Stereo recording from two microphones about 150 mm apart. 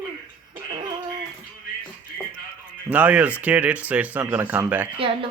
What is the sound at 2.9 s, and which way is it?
Speech, 10° right (ahead or behind).